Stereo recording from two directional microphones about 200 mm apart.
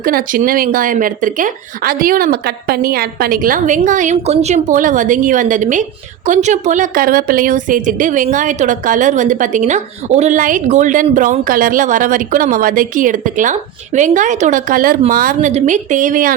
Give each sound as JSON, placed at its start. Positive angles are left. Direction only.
{"t": 0.0, "sound": "a woman's voice", "side_deg": -45}